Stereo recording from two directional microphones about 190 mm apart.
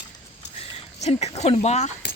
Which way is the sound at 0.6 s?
35° left (ahead or behind).